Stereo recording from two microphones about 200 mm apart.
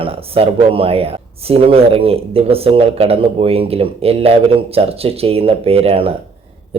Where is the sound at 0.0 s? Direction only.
30° right (ahead or behind).